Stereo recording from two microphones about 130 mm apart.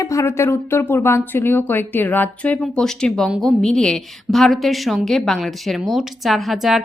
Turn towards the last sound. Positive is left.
turn(degrees=0)  # may be behind; listen again after turning